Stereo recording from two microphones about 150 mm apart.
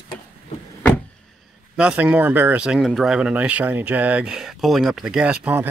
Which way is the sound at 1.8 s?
10° right (ahead or behind).